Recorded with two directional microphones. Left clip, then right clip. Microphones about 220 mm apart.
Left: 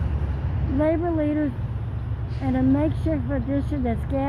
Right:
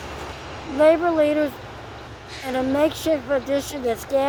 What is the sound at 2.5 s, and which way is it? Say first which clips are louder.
Speech: right 3 dB; 20° right (ahead or behind).